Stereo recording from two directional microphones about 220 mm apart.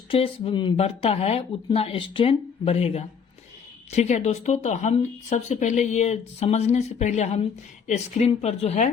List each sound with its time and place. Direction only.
0.1 s speech: 25° left (ahead or behind)